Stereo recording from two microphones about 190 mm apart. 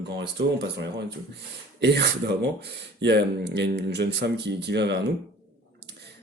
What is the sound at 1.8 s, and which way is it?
Speech, 60° right (ahead or behind).